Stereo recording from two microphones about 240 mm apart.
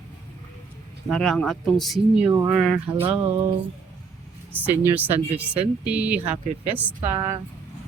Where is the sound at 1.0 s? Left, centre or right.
Centre.